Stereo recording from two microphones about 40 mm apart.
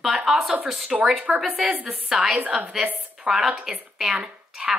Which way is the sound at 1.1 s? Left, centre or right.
Right.